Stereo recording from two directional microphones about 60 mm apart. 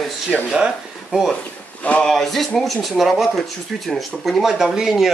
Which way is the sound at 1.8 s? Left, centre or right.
Left.